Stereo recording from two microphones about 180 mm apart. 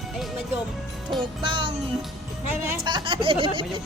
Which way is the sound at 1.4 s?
30° right (ahead or behind).